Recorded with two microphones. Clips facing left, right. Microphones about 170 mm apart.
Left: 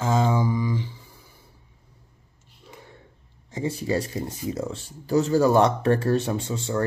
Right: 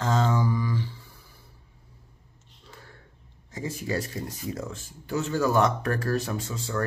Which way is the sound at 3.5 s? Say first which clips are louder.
Left 5 dB; 30° left (ahead or behind).